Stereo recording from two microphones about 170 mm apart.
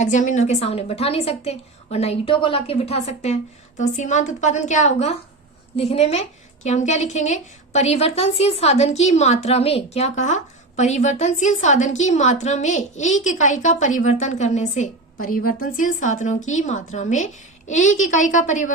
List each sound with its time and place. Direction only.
0.0 s a woman's voice: 45° left (ahead or behind)